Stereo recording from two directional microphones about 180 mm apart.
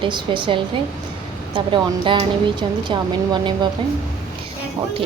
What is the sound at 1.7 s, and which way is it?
A woman's voice, 25° right (ahead or behind).